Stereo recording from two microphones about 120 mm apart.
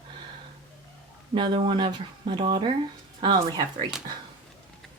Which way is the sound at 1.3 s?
40° right (ahead or behind).